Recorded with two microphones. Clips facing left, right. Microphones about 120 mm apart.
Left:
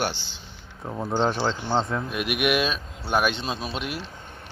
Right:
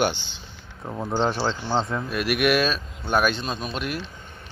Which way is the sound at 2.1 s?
15° left (ahead or behind).